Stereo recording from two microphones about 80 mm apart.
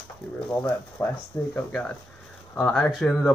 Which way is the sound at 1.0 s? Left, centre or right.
Left.